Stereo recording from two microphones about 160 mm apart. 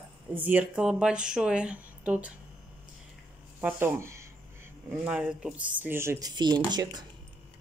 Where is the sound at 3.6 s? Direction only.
15° right (ahead or behind).